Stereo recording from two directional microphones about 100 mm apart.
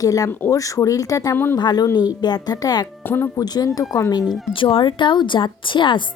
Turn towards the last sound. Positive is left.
turn(degrees=55)  # may be behind; listen again after turning